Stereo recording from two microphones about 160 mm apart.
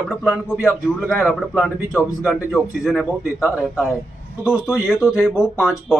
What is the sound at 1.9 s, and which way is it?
Speech, 20° left (ahead or behind).